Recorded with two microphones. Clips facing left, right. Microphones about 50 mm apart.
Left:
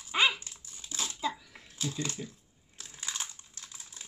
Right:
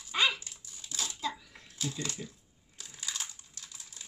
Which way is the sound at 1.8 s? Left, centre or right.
Left.